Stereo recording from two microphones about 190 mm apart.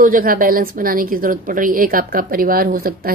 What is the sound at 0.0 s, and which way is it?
A woman's voice, 50° right (ahead or behind).